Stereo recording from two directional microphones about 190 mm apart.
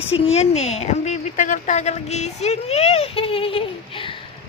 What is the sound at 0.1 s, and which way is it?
Speech, 30° left (ahead or behind).